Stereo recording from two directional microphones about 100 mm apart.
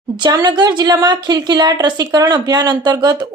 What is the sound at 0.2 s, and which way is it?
A woman's voice, 40° right (ahead or behind).